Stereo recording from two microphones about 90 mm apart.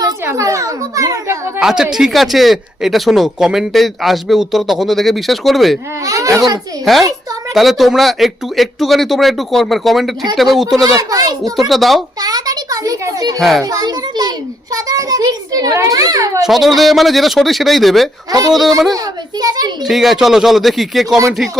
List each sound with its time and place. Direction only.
0.3 s a sound: 35° right (ahead or behind)
1.5 s speech: 5° right (ahead or behind)
6.1 s a child's voice: 40° right (ahead or behind)
6.9 s speech: centre (ahead or behind)
10.8 s a child's voice: 40° right (ahead or behind)
11.7 s speech: centre (ahead or behind)
12.2 s a sound: 45° right (ahead or behind)
13.6 s a child's voice: 40° right (ahead or behind)
16.4 s speech: centre (ahead or behind)
18.3 s a child's voice: 45° right (ahead or behind)
19.8 s speech: centre (ahead or behind)